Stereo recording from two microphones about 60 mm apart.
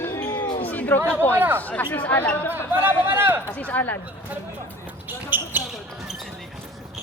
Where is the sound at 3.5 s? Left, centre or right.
Left.